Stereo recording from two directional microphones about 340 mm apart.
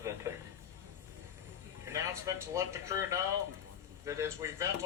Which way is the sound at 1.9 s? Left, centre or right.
Centre.